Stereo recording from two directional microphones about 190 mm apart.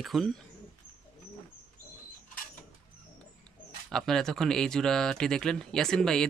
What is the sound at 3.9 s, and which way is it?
Speech, centre (ahead or behind).